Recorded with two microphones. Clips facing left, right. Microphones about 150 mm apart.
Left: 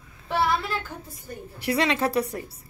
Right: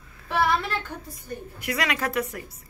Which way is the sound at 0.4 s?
Centre (ahead or behind).